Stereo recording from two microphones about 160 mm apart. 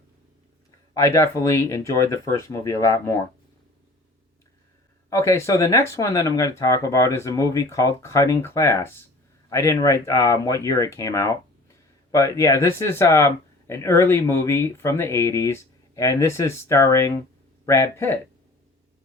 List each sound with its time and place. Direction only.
0.9 s speech: 20° left (ahead or behind)
5.0 s speech: 20° left (ahead or behind)